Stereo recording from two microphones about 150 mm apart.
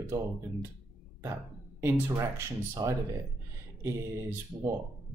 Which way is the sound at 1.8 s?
20° right (ahead or behind).